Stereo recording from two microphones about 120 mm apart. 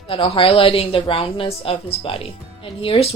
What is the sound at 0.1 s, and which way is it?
Speech, 50° left (ahead or behind).